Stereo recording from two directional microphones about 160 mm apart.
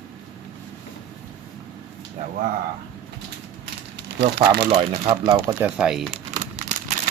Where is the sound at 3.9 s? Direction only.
90° right.